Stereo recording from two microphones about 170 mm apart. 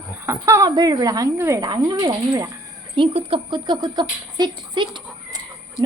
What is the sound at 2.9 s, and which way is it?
Speech, 30° right (ahead or behind).